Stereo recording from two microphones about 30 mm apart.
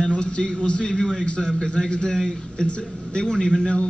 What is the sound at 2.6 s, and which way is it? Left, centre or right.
Speech, left.